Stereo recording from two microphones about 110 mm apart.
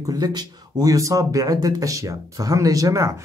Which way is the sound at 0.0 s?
35° right (ahead or behind).